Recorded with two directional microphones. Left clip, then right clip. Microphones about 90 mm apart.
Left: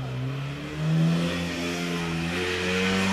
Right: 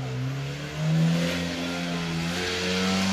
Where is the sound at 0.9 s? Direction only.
40° right (ahead or behind).